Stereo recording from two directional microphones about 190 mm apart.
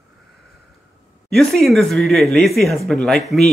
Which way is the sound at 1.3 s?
Centre (ahead or behind).